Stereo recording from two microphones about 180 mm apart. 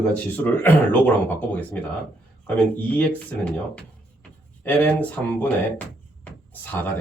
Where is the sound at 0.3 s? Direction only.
10° left (ahead or behind).